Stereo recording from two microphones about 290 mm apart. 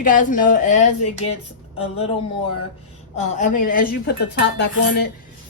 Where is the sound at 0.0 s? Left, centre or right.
Left.